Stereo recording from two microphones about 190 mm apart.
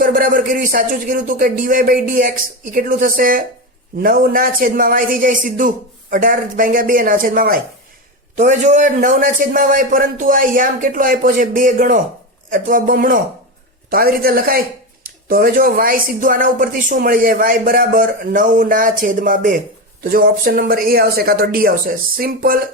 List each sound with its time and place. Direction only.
0.0 s speech: 45° right (ahead or behind)